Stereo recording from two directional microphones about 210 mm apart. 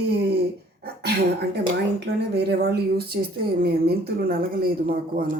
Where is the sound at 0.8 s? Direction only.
50° right (ahead or behind).